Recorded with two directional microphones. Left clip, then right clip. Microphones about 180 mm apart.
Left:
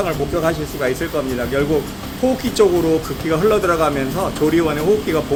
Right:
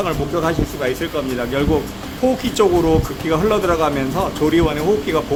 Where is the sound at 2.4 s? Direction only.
20° right (ahead or behind).